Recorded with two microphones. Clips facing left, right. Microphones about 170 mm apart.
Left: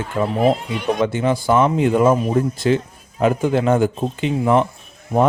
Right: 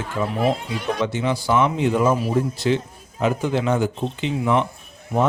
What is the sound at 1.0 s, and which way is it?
Speech, 50° left (ahead or behind).